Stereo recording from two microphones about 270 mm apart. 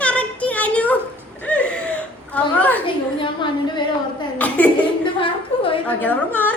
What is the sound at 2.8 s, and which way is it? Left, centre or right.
A woman's voice, centre.